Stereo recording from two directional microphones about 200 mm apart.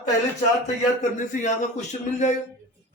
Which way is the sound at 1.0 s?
40° left (ahead or behind).